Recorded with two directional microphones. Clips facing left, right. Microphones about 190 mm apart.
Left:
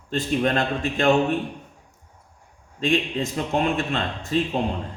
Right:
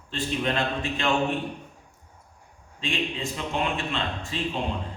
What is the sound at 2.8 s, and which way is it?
Speech, 45° left (ahead or behind).